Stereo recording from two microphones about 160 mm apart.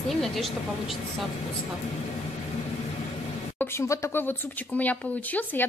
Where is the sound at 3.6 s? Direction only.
15° left (ahead or behind).